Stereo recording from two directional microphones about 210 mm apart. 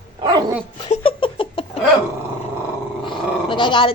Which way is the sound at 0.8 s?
25° left (ahead or behind).